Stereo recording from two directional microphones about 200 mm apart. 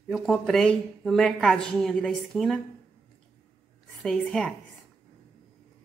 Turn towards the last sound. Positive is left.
turn(degrees=5)  # may be behind; listen again after turning